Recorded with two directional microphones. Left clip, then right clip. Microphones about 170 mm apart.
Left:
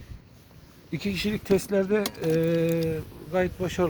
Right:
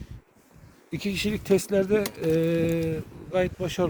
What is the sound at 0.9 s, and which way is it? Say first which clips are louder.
Speech: right 1 dB; 40° right (ahead or behind).